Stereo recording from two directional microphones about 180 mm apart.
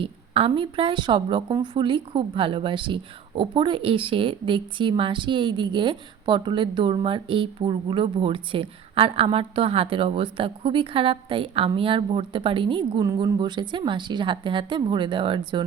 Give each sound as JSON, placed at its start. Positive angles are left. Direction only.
{"t": 0.0, "sound": "a woman's voice", "side_deg": -30}